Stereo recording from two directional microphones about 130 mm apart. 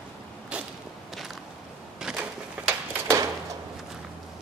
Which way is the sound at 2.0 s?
10° right (ahead or behind).